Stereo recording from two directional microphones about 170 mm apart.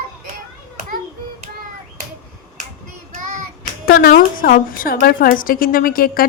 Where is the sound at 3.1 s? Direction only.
45° right (ahead or behind).